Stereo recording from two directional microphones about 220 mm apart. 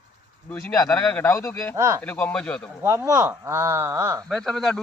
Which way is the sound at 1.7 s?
10° right (ahead or behind).